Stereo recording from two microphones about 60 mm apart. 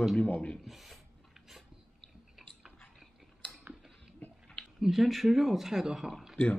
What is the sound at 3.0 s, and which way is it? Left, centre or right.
Chewing, centre.